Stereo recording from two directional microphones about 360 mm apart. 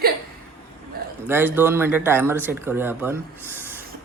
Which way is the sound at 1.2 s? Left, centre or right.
Centre.